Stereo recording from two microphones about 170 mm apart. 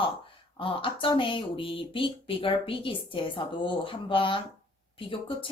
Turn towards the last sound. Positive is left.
turn(degrees=30)  # may be behind; listen again after turning